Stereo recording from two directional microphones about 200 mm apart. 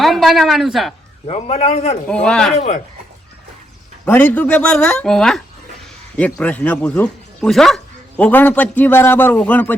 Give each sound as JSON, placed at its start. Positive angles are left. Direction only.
{"t": 0.0, "sound": "a woman's voice", "side_deg": 0}
{"t": 1.3, "sound": "a man's voice", "side_deg": 30}
{"t": 2.0, "sound": "speech", "side_deg": 5}
{"t": 2.6, "sound": "a man's voice", "side_deg": 35}
{"t": 4.0, "sound": "speech", "side_deg": 10}